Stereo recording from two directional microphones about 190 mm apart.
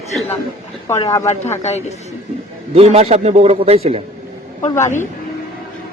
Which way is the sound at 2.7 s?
35° right (ahead or behind).